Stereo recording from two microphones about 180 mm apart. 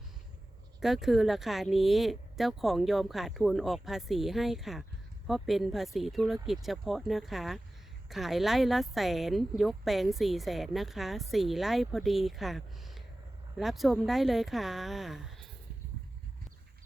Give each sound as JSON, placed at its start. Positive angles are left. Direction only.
{"t": 0.8, "sound": "speech", "side_deg": 0}